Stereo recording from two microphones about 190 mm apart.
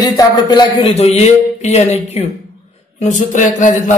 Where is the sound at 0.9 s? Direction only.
35° left (ahead or behind).